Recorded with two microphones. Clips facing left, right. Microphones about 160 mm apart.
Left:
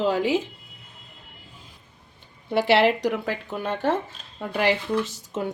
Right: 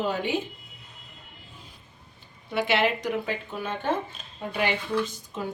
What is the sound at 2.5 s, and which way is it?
Speech, 70° left (ahead or behind).